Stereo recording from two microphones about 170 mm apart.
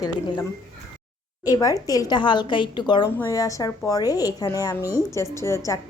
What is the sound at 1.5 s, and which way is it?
A woman's voice, 20° left (ahead or behind).